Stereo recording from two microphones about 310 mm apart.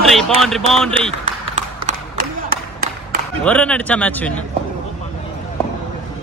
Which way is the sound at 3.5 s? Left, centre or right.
Centre.